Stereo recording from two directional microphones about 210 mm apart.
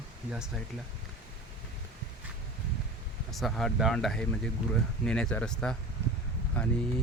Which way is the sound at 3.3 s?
Centre (ahead or behind).